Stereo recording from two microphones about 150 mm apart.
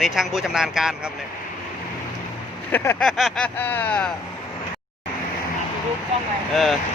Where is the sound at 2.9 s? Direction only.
Centre (ahead or behind).